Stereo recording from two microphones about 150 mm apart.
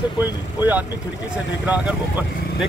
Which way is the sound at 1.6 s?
10° right (ahead or behind).